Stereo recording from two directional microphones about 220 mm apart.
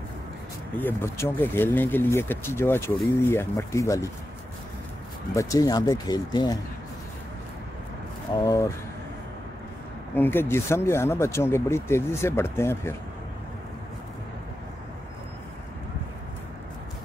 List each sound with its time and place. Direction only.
0.7 s speech: 10° left (ahead or behind)
5.3 s speech: 15° left (ahead or behind)
8.3 s speech: 15° left (ahead or behind)
10.1 s speech: 10° left (ahead or behind)